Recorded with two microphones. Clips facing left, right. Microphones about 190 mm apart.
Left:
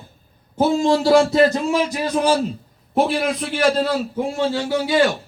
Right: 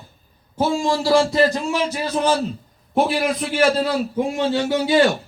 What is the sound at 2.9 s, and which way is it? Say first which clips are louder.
Speech: even; 5° right (ahead or behind).